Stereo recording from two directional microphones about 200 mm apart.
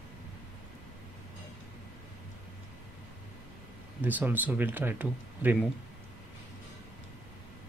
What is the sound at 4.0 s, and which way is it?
Speech, 10° right (ahead or behind).